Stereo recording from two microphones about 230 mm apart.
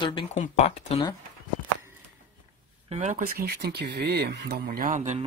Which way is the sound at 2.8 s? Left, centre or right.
Right.